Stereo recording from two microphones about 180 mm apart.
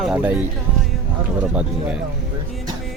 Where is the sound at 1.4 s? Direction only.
5° right (ahead or behind).